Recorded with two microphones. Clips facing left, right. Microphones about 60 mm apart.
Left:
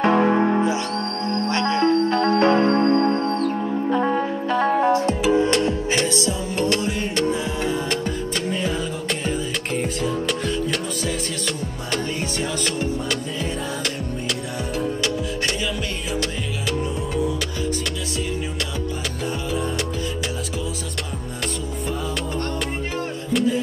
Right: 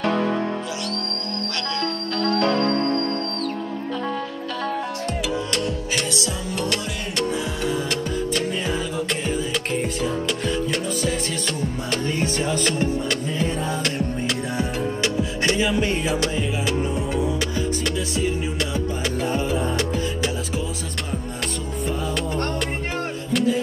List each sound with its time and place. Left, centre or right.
0.0 s music: left
14.6 s music: right